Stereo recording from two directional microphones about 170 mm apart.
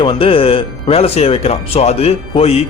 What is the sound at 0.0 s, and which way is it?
Speech, 30° left (ahead or behind).